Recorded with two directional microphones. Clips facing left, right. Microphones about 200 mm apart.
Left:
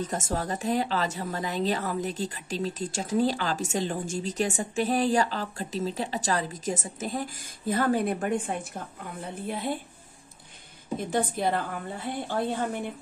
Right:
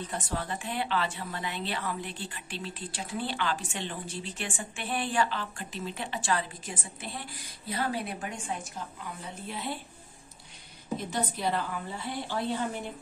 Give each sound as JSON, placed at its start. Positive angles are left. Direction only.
{"t": 0.0, "sound": "a woman's voice", "side_deg": 45}
{"t": 11.0, "sound": "a woman's voice", "side_deg": 50}